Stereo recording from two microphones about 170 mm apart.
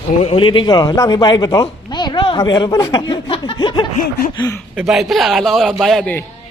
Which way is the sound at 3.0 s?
25° left (ahead or behind).